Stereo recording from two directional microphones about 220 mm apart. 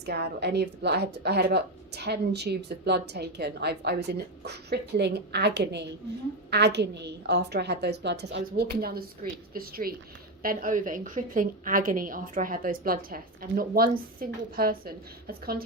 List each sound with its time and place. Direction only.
0.0 s a woman's voice: 50° right (ahead or behind)